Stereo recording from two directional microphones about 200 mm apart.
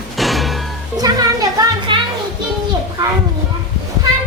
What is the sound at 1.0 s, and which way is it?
Music, 20° right (ahead or behind).